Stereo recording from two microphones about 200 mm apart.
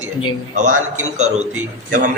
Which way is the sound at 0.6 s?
40° right (ahead or behind).